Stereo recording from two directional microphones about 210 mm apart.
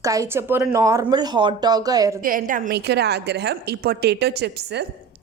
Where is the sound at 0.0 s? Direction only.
15° right (ahead or behind).